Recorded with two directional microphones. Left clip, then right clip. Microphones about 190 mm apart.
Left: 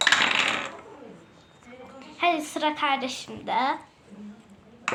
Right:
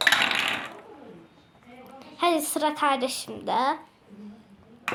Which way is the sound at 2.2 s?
60° right (ahead or behind).